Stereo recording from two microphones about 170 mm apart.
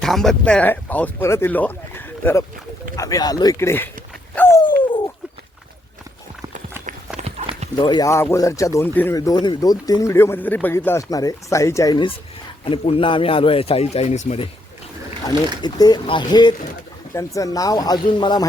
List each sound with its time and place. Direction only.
0.0 s a man's voice: centre (ahead or behind)
4.4 s a sound: 15° left (ahead or behind)
4.6 s a sound: 30° left (ahead or behind)
7.2 s horse: 40° right (ahead or behind)
7.8 s a man's voice: 25° left (ahead or behind)
15.6 s a man's voice: 25° left (ahead or behind)